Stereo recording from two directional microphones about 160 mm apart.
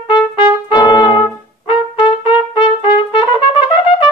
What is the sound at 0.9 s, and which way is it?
Brass instrument, 25° left (ahead or behind).